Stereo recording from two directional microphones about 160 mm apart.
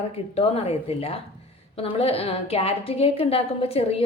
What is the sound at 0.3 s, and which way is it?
A woman's voice, 40° left (ahead or behind).